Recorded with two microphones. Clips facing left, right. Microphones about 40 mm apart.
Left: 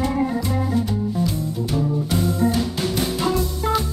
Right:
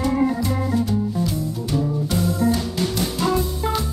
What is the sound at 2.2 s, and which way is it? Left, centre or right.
Music, left.